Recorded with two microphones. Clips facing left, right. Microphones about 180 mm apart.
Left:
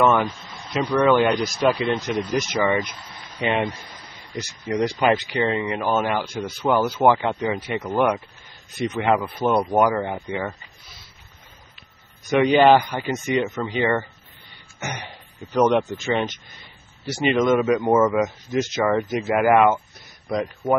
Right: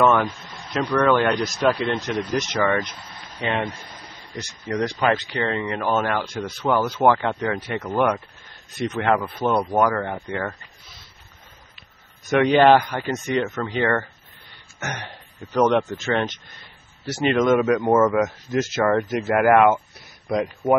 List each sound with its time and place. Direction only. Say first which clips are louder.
0.0 s a sound: even; centre (ahead or behind)
0.7 s speech: left 1 dB; 10° left (ahead or behind)
12.3 s a man's voice: even; 5° left (ahead or behind)